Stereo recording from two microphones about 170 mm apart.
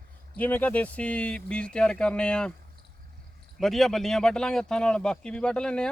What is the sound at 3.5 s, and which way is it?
Speech, centre (ahead or behind).